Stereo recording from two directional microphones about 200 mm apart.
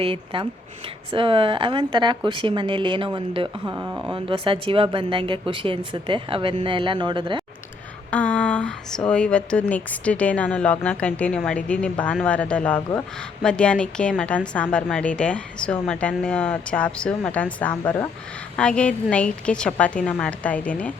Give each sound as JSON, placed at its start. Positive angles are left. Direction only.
{"t": 0.0, "sound": "speech", "side_deg": -25}
{"t": 8.1, "sound": "a woman's voice", "side_deg": 5}